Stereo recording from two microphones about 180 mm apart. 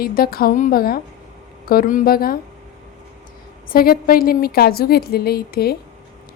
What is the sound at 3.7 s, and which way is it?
A woman's voice, 55° left (ahead or behind).